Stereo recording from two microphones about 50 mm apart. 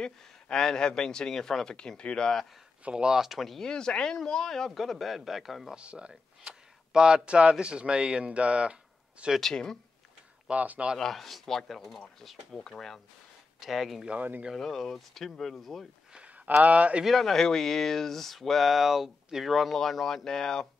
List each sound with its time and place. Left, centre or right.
0.0 s speech: centre
2.8 s speech: centre
3.2 s speech: centre
3.6 s speech: centre
5.8 s speech: right
9.4 s speech: centre
10.5 s speech: right
11.0 s speech: centre
13.6 s speech: centre
14.1 s speech: right
14.5 s speech: centre
16.6 s speech: right
17.0 s speech: centre